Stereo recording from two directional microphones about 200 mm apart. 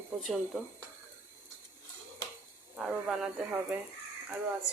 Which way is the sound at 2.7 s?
5° right (ahead or behind).